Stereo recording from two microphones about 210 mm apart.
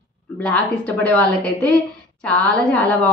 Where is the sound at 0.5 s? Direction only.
5° left (ahead or behind).